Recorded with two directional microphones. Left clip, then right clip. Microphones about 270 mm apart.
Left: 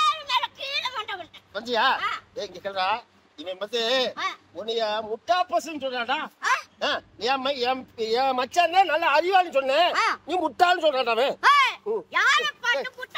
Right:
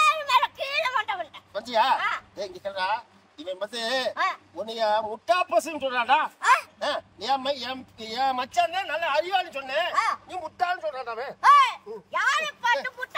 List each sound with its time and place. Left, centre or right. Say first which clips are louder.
0.0 s fowl: right 3 dB; centre
1.5 s speech: even; centre
2.0 s a woman's voice: right 1 dB; centre
2.3 s speech: left 2 dB; centre
6.8 s speech: left 2 dB; centre
9.9 s speech: left 1 dB; centre
10.6 s speech: left 7 dB; left
11.4 s a sound: right 3 dB; centre